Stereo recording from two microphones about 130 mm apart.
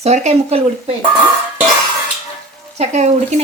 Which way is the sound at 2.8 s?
60° right (ahead or behind).